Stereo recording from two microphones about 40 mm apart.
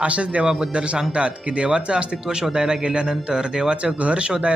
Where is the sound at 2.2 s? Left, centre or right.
Centre.